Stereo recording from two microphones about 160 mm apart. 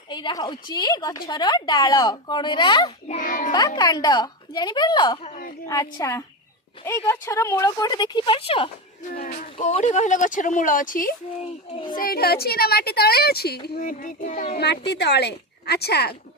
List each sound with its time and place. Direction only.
0.1 s speech: 30° left (ahead or behind)
3.1 s speech: 55° left (ahead or behind)
3.5 s speech: 25° left (ahead or behind)
5.2 s a sound: 55° left (ahead or behind)
5.6 s speech: 20° left (ahead or behind); by 8.7 s 35° left (ahead or behind)
9.1 s a woman's voice: 55° left (ahead or behind); by 13.6 s 80° left
13.7 s speech: 55° left (ahead or behind)
14.6 s a woman's voice: 90° left